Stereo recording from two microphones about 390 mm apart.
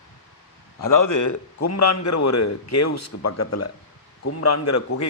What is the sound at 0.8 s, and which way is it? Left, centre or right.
A man's voice, left.